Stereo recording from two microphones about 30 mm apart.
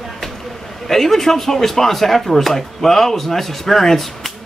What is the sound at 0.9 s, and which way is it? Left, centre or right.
Speech, centre.